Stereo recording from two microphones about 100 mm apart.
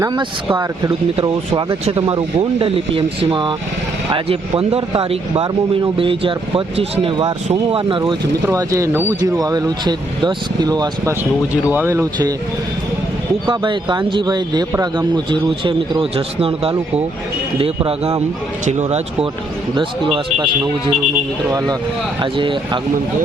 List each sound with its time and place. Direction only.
0.0 s speech: 50° right (ahead or behind)
2.0 s speech: 65° right (ahead or behind)
6.0 s speech: 60° right (ahead or behind)
7.7 s speech: 60° right (ahead or behind)
8.5 s speech: 30° right (ahead or behind)
9.2 s speech: 35° right (ahead or behind)
11.7 s speech: 25° right (ahead or behind)
13.5 s speech: 50° right (ahead or behind); by 16.7 s 70° right (ahead or behind)
17.8 s a man's voice: 80° right
18.9 s speech: 90° right
20.1 s speech: 55° right (ahead or behind)
22.2 s speech: 55° right (ahead or behind)